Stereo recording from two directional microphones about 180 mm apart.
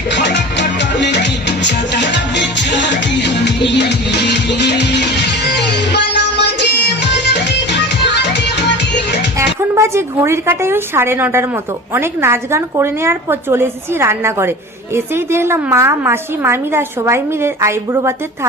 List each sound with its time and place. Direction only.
0.1 s music: 75° left (ahead or behind)
9.6 s a woman's voice: 15° right (ahead or behind)